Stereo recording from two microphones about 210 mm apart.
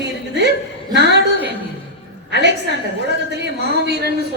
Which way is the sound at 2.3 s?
55° right (ahead or behind).